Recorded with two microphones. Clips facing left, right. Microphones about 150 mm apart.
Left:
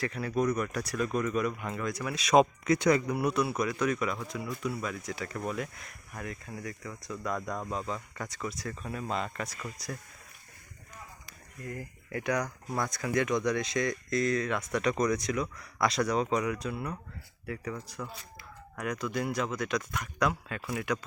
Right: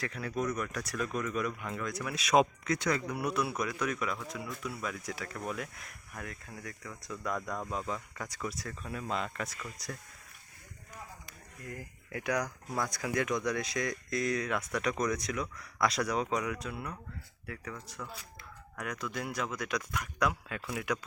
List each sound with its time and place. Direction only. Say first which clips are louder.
0.0 s speech: left 5 dB; centre (ahead or behind)
2.6 s speech: left 7 dB; 20° left (ahead or behind)
3.1 s speech: left 4 dB; centre (ahead or behind)
11.6 s speech: left 4 dB; centre (ahead or behind)